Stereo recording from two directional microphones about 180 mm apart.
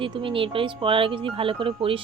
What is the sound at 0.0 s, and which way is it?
A woman's voice, 30° right (ahead or behind).